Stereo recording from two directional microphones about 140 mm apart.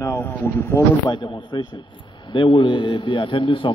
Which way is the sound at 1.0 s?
35° left (ahead or behind).